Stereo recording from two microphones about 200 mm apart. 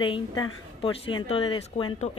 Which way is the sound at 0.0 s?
20° left (ahead or behind).